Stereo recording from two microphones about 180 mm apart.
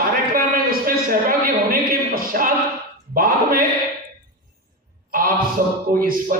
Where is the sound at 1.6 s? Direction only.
50° right (ahead or behind).